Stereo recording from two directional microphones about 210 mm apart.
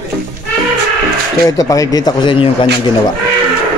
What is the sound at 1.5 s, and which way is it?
Speech, 15° left (ahead or behind).